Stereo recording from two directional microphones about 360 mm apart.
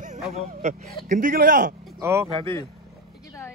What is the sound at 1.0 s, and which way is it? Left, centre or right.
Speech, right.